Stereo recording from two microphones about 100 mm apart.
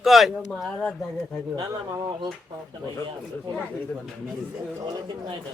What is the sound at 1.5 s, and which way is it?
Speech, 45° right (ahead or behind).